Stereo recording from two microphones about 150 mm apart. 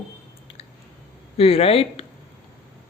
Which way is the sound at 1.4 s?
40° left (ahead or behind).